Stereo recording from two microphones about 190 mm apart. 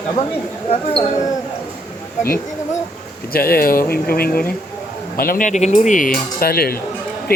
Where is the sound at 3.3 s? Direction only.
50° left (ahead or behind).